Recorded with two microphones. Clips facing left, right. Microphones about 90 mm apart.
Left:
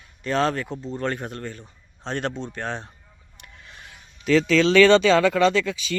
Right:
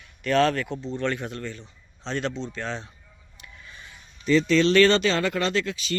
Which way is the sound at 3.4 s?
65° left (ahead or behind).